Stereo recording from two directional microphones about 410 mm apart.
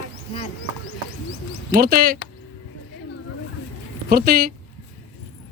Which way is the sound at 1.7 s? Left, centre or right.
Right.